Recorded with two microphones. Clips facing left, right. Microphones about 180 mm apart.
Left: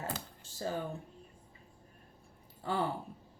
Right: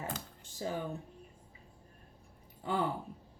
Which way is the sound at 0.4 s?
15° right (ahead or behind).